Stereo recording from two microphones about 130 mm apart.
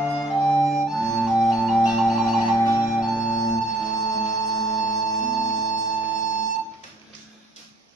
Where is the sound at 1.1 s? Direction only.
Centre (ahead or behind).